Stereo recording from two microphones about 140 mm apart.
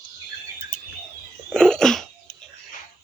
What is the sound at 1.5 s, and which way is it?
Cough, 5° left (ahead or behind).